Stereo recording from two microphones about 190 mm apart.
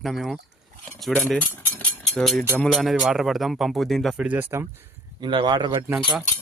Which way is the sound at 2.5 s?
Centre (ahead or behind).